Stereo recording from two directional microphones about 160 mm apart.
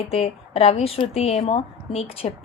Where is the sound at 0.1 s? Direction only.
40° left (ahead or behind).